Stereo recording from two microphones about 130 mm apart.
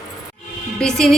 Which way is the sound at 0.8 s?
5° left (ahead or behind).